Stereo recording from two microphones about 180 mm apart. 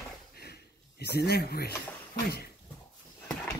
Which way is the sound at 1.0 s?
60° left (ahead or behind).